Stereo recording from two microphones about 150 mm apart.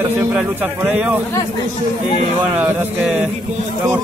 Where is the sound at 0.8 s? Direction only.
10° right (ahead or behind).